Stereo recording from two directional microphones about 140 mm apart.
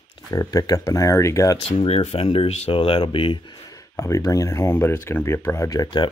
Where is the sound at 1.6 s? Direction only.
50° left (ahead or behind).